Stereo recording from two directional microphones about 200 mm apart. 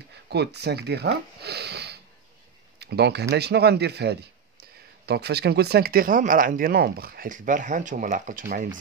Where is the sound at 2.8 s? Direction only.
55° right (ahead or behind).